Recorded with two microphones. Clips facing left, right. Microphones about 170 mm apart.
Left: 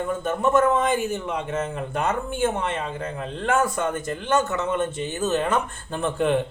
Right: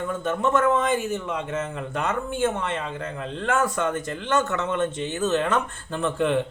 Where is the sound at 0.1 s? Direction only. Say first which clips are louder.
Left 2 dB; 10° left (ahead or behind).